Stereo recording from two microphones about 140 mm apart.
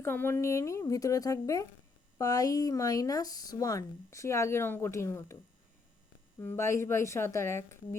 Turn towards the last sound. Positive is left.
turn(degrees=20)  # may be behind; listen again after turning